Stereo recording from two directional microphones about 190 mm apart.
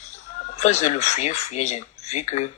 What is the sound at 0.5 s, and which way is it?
Speech, 35° left (ahead or behind).